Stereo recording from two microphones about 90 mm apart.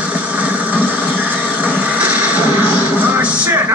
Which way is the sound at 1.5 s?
15° right (ahead or behind).